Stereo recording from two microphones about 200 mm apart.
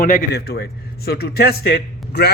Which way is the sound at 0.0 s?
45° left (ahead or behind).